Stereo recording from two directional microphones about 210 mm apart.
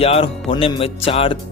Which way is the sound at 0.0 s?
25° left (ahead or behind).